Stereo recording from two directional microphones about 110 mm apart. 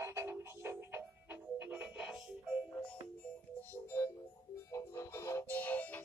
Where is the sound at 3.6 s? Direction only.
25° left (ahead or behind).